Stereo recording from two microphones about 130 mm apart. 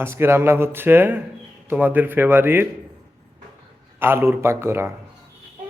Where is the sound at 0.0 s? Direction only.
20° right (ahead or behind).